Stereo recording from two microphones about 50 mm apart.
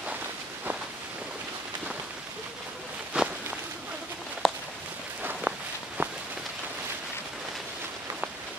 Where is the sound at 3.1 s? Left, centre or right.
Centre.